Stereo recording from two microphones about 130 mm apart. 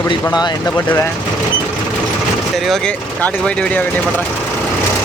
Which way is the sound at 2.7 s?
5° left (ahead or behind).